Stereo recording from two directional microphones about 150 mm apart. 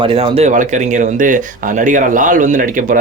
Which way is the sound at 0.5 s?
60° right (ahead or behind).